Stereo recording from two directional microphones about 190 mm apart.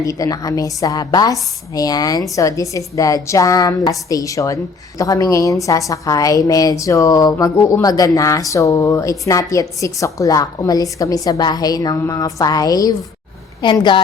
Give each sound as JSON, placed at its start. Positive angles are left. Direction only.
{"t": 0.0, "sound": "a woman's voice", "side_deg": 20}